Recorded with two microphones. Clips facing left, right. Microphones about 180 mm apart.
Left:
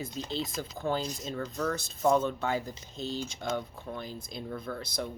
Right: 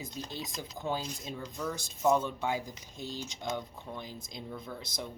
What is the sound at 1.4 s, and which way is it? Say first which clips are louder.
Speech: left 6 dB; 75° left (ahead or behind).